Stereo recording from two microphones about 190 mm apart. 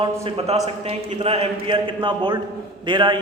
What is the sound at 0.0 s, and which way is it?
A man's voice, 30° right (ahead or behind).